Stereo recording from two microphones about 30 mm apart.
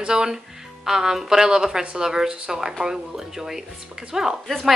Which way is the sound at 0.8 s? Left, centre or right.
Centre.